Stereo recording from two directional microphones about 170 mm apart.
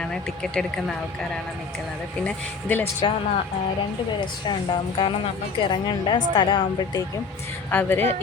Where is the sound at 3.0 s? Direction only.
30° left (ahead or behind).